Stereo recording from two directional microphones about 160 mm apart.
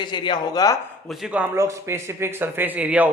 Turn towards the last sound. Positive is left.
turn(degrees=-10)  # may be behind; listen again after turning